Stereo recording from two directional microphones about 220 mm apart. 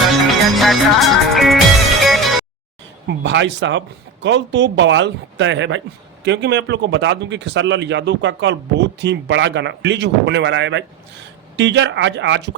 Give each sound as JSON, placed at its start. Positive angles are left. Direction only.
{"t": 0.5, "sound": "music", "side_deg": 0}
{"t": 3.2, "sound": "speech", "side_deg": -55}